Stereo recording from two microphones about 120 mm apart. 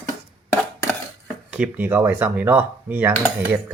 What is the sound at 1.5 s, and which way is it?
Speech, 10° right (ahead or behind).